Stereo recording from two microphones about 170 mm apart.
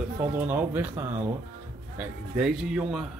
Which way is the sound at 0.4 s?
10° right (ahead or behind).